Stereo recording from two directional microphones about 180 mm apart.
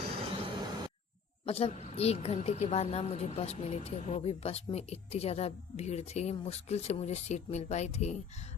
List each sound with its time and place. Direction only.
0.2 s vehicle: 25° right (ahead or behind)
1.5 s a woman's voice: 35° left (ahead or behind)